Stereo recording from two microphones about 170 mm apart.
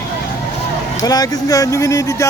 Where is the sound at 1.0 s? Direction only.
20° left (ahead or behind).